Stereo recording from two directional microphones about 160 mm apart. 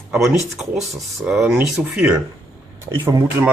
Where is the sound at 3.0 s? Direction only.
20° right (ahead or behind).